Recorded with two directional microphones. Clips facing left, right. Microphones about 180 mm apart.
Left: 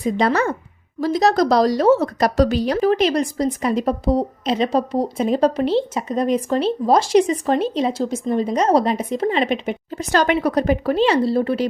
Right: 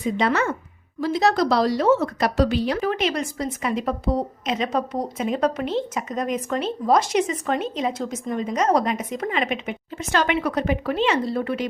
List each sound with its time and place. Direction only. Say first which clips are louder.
0.0 s a woman's voice: left 3 dB; 40° left (ahead or behind)